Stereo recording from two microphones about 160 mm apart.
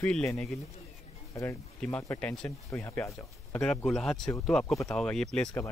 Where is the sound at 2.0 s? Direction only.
10° left (ahead or behind).